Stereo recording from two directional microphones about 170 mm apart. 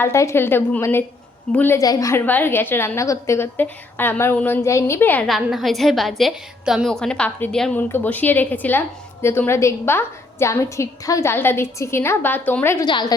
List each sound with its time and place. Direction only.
0.0 s a woman's voice: 15° left (ahead or behind)
5.3 s a woman's voice: centre (ahead or behind)
12.8 s a woman's voice: 25° left (ahead or behind)